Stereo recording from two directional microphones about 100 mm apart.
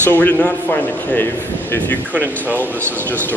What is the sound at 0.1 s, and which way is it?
A man's voice, 20° left (ahead or behind).